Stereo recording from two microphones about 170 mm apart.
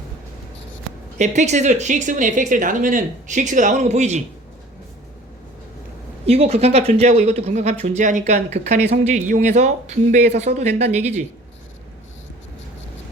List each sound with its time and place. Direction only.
1.2 s speech: 45° right (ahead or behind)
6.2 s speech: 35° right (ahead or behind)